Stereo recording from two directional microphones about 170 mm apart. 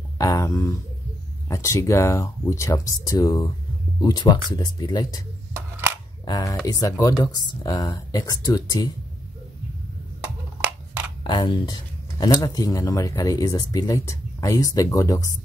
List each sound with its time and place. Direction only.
0.2 s speech: 20° left (ahead or behind)
5.5 s a sound: 15° right (ahead or behind)
6.2 s speech: 20° left (ahead or behind)
11.2 s speech: 25° left (ahead or behind)